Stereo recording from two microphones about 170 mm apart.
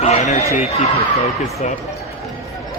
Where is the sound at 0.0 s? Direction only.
35° left (ahead or behind).